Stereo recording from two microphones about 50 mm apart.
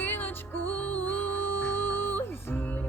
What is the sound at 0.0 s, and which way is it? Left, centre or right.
Music, left.